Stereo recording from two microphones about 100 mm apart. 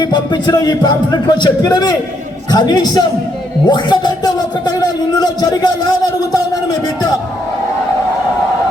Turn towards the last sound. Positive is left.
turn(degrees=40)  # may be behind; listen again after turning